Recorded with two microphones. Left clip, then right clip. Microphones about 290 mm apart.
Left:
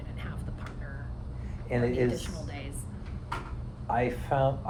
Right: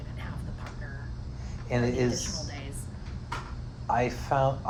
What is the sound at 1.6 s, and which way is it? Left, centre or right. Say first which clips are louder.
Speech: even; right.